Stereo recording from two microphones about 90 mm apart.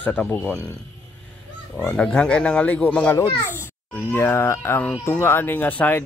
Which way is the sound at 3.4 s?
25° left (ahead or behind).